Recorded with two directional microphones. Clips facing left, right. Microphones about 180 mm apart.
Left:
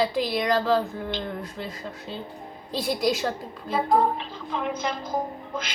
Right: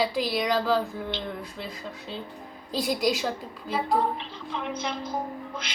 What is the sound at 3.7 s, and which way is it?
Child singing, 40° left (ahead or behind).